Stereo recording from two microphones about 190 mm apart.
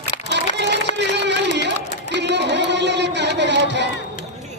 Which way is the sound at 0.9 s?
65° right (ahead or behind).